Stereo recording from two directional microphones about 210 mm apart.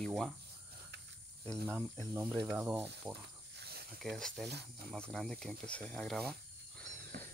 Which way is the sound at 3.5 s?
50° right (ahead or behind).